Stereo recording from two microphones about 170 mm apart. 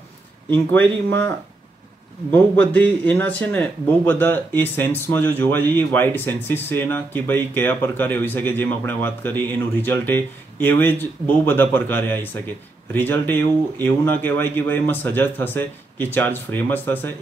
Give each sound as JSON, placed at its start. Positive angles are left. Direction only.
{"t": 0.5, "sound": "speech", "side_deg": 10}
{"t": 2.3, "sound": "speech", "side_deg": 10}